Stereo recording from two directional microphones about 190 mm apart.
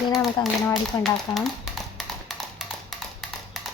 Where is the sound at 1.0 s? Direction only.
Centre (ahead or behind).